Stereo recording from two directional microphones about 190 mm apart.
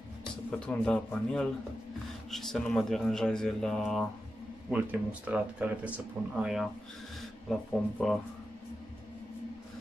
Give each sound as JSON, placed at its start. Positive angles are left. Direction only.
{"t": 0.5, "sound": "speech", "side_deg": 5}
{"t": 4.6, "sound": "speech", "side_deg": -10}